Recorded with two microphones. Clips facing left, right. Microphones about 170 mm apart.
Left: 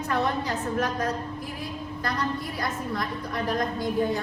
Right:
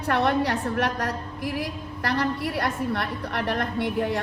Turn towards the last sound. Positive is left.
turn(degrees=-70)  # may be behind; listen again after turning